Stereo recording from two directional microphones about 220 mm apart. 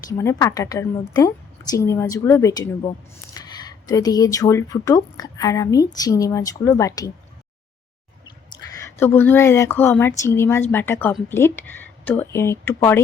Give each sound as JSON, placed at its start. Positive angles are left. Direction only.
{"t": 0.2, "sound": "speech", "side_deg": 15}
{"t": 8.4, "sound": "speech", "side_deg": 15}